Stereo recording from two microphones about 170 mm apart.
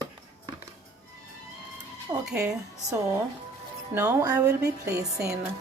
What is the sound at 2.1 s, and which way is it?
Music, 20° right (ahead or behind).